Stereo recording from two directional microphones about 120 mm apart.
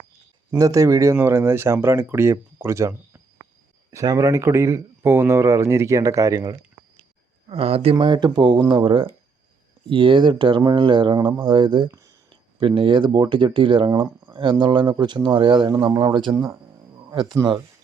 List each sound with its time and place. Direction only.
0.6 s speech: 25° right (ahead or behind)
7.4 s speech: 55° right (ahead or behind)
7.9 s speech: 35° right (ahead or behind)
11.9 s speech: 25° right (ahead or behind)
12.3 s a sound: 45° right (ahead or behind)
13.1 s speech: 35° right (ahead or behind)
15.7 s speech: 30° right (ahead or behind)
16.3 s insect: 25° right (ahead or behind)
17.4 s speech: 25° right (ahead or behind)